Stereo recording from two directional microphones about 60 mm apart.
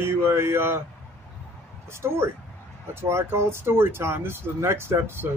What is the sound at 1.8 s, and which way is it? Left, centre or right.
Speech, right.